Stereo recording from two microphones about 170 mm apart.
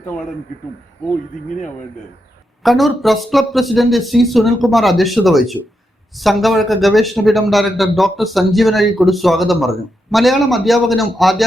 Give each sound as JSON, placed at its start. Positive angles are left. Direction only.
{"t": 1.5, "sound": "speech", "side_deg": 45}
{"t": 2.6, "sound": "a man's voice", "side_deg": 0}